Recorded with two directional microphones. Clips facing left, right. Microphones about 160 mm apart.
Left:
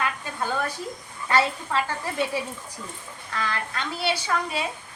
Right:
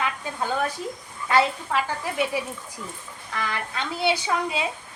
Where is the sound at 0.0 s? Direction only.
15° right (ahead or behind).